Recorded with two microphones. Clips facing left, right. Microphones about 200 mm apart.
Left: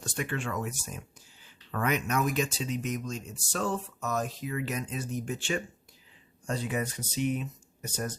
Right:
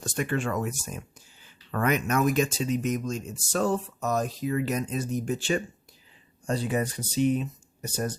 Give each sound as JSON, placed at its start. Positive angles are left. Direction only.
{"t": 0.0, "sound": "speech", "side_deg": -45}